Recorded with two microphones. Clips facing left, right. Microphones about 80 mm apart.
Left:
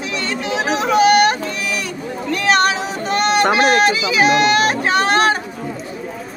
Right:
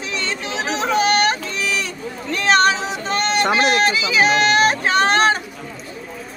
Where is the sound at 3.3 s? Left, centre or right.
Left.